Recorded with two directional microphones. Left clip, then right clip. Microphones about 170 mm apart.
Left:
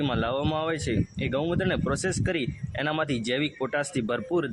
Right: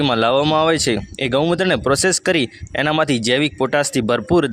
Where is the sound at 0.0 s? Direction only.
45° right (ahead or behind).